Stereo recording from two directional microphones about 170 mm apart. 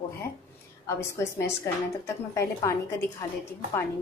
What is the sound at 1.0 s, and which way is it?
Speech, 15° left (ahead or behind).